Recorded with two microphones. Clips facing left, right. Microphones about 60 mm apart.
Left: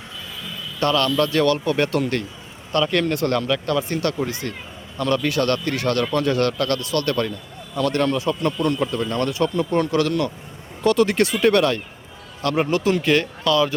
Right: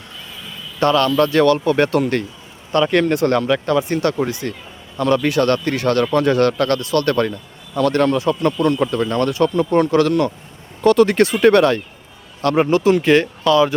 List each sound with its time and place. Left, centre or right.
0.8 s a man's voice: right